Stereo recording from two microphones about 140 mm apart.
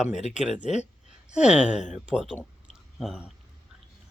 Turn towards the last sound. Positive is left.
turn(degrees=-5)  # may be behind; listen again after turning